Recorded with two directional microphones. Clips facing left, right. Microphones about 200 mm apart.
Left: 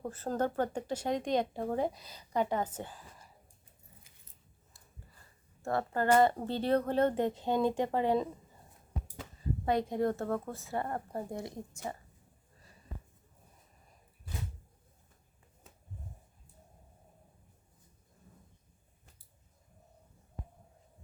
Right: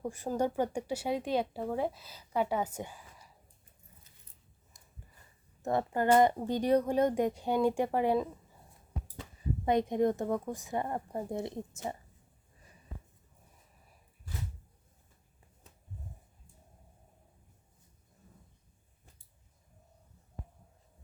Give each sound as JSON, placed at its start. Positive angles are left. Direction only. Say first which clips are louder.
{"t": 0.0, "sound": "speech", "louder": "right 1 dB", "side_deg": -15}
{"t": 4.7, "sound": "a sound", "louder": "left 1 dB", "side_deg": -20}
{"t": 5.6, "sound": "speech", "louder": "right 1 dB", "side_deg": -15}
{"t": 9.6, "sound": "a woman's voice", "louder": "right 3 dB", "side_deg": -20}